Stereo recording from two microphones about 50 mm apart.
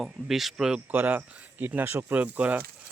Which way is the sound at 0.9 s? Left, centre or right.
Right.